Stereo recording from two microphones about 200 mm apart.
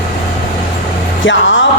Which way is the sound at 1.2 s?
65° left (ahead or behind).